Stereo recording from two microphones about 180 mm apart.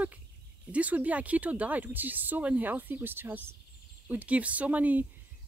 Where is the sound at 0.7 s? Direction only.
10° right (ahead or behind).